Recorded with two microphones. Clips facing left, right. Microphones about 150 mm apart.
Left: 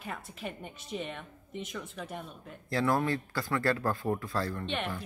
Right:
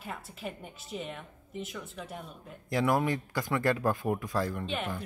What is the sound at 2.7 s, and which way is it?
A woman's voice, 15° right (ahead or behind).